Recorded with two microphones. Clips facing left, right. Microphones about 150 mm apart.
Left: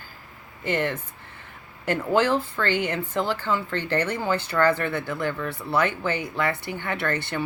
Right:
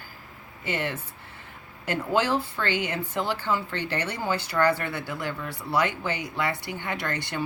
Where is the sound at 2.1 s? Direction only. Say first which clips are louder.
Left 3 dB; 10° right (ahead or behind).